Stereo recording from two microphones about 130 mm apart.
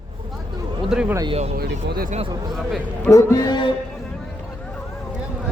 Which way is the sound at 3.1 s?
25° left (ahead or behind).